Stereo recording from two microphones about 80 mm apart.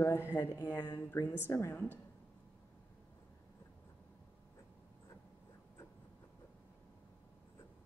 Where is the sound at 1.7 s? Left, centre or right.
Left.